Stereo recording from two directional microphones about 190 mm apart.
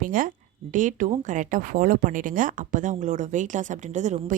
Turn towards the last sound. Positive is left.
turn(degrees=-40)  # may be behind; listen again after turning